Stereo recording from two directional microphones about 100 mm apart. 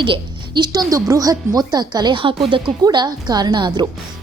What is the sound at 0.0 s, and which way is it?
A woman's voice, 50° right (ahead or behind).